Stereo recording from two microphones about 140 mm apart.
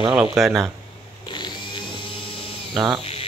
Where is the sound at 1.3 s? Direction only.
35° left (ahead or behind).